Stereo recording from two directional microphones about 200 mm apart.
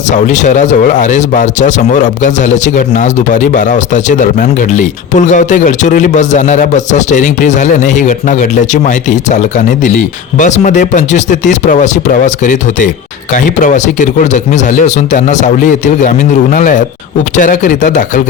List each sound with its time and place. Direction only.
0.1 s speech: 35° left (ahead or behind)